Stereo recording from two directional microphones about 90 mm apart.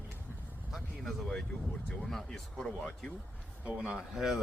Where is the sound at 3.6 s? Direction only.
10° right (ahead or behind).